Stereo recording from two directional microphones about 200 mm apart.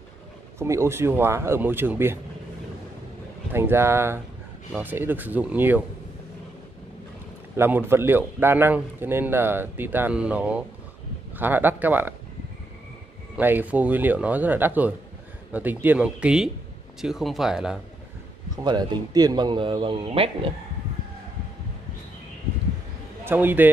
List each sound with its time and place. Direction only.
0.6 s a man's voice: 15° right (ahead or behind)
3.5 s a man's voice: 10° right (ahead or behind)
7.5 s a man's voice: 10° right (ahead or behind)
13.4 s a man's voice: 10° right (ahead or behind)
18.6 s speech: 20° right (ahead or behind)
23.2 s a man's voice: 10° right (ahead or behind)